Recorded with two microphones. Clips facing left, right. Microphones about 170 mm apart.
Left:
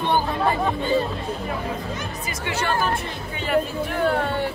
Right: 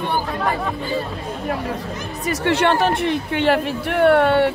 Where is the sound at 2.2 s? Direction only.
70° right (ahead or behind).